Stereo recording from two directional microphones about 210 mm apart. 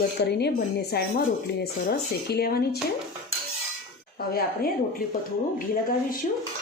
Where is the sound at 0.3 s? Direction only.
50° left (ahead or behind).